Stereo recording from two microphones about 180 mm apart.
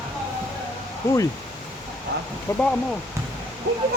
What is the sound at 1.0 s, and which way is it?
Speech, 15° left (ahead or behind).